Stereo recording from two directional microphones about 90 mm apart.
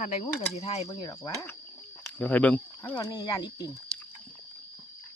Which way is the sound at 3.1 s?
50° left (ahead or behind).